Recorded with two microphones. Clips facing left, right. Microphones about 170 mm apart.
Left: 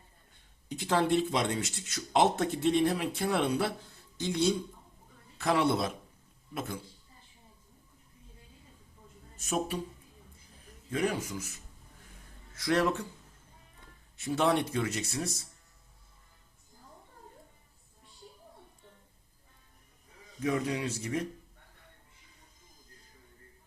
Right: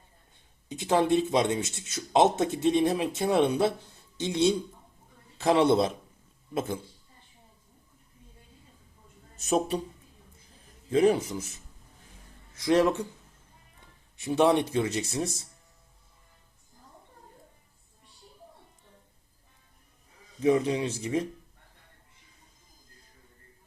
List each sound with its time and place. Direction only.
0.7 s speech: 20° right (ahead or behind)
9.4 s speech: 25° right (ahead or behind)
10.9 s speech: 25° right (ahead or behind)
12.5 s speech: 20° right (ahead or behind)
14.2 s speech: 20° right (ahead or behind)
20.4 s speech: 25° right (ahead or behind)